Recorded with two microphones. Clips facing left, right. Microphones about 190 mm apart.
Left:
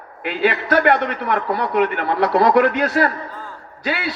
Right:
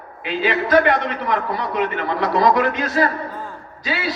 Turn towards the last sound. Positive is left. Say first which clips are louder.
# left 1 dB
turn(degrees=60)  # may be behind; listen again after turning